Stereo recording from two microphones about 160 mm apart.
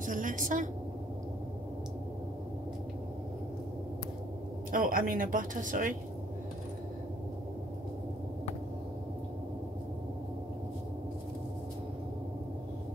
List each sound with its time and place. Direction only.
0.0 s a woman's voice: 55° right (ahead or behind)
4.6 s speech: 60° right (ahead or behind)